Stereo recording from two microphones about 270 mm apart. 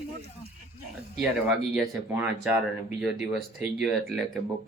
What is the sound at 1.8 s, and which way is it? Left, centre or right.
Speech, centre.